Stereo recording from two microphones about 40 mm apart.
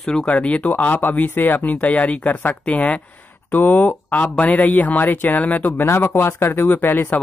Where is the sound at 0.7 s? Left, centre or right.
Left.